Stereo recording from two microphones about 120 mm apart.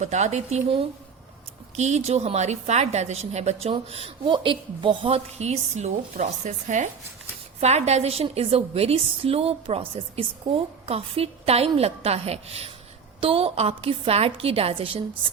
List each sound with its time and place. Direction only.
0.0 s a woman's voice: 80° right
7.6 s a woman's voice: 65° right (ahead or behind); by 15.3 s 50° right (ahead or behind)